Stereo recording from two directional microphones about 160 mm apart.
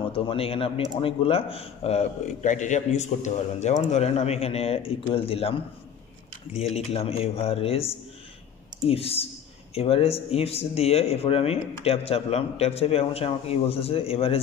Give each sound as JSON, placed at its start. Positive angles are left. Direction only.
{"t": 0.1, "sound": "a man's voice", "side_deg": 35}